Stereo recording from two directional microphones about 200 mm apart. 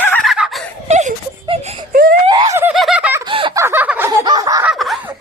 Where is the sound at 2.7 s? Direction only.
Centre (ahead or behind).